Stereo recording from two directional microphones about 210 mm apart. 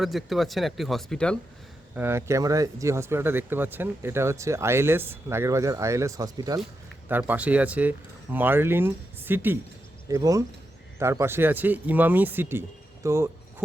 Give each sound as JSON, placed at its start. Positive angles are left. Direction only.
{"t": 0.0, "sound": "speech", "side_deg": 0}
{"t": 2.0, "sound": "speech", "side_deg": -10}